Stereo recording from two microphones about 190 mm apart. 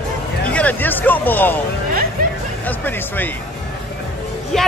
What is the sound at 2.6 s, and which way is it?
Speech, 10° left (ahead or behind).